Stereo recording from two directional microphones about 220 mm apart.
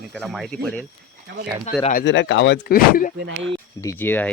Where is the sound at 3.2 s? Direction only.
55° right (ahead or behind).